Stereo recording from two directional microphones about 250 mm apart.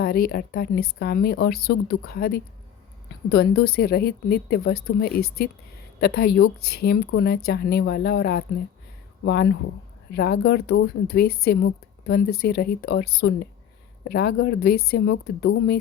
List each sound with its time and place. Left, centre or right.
0.0 s speech: left